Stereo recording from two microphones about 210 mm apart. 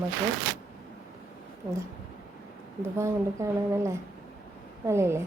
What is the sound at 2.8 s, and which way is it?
Speech, 15° right (ahead or behind).